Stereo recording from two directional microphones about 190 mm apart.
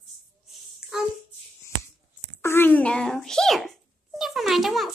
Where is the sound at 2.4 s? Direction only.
10° left (ahead or behind).